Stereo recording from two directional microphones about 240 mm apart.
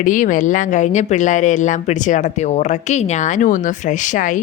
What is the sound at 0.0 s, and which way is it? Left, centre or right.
Speech, left.